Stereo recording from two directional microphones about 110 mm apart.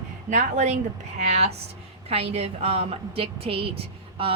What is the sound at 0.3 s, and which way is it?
Speech, 90° right.